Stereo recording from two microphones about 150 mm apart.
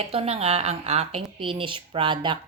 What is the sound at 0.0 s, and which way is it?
A woman's voice, 40° right (ahead or behind).